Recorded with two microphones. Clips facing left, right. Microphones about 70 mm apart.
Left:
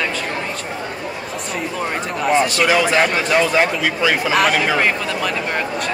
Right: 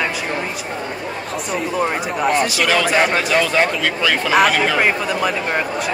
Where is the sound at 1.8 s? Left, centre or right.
Centre.